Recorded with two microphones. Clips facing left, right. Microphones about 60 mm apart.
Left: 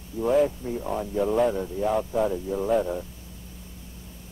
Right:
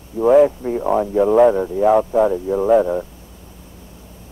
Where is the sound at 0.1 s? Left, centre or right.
Right.